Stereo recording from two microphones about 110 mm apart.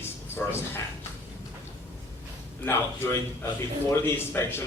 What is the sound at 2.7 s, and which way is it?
A man's voice, 20° left (ahead or behind).